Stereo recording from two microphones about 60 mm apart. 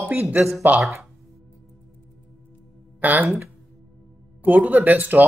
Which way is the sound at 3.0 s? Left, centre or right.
Right.